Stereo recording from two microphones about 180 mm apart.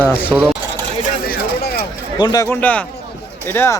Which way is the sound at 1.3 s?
60° left (ahead or behind).